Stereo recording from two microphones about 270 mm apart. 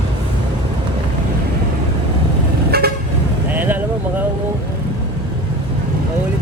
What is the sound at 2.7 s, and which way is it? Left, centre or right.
Vehicle, right.